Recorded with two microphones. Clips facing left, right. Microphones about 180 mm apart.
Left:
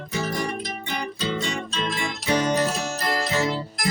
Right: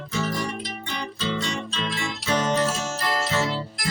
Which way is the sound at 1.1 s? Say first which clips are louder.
Right 1 dB; 45° left (ahead or behind).